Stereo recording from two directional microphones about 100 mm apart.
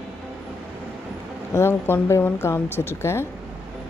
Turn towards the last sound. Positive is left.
turn(degrees=25)  # may be behind; listen again after turning